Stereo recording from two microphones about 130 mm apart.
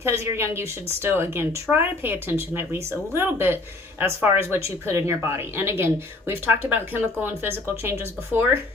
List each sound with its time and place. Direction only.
0.0 s speech: 20° right (ahead or behind)